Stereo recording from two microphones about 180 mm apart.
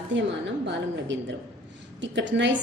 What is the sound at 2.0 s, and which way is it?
Speech, 85° right.